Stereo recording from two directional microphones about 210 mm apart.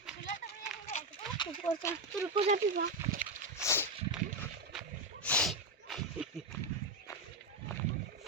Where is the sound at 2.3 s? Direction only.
25° right (ahead or behind).